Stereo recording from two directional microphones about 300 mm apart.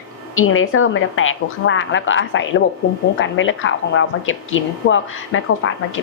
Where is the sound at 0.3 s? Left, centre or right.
Left.